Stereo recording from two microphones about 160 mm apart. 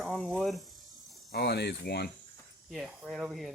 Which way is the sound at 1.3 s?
90° left.